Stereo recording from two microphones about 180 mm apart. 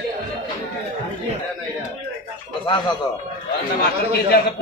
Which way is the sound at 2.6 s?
25° left (ahead or behind).